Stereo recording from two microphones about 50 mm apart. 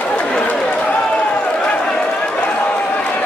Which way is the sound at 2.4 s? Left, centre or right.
Left.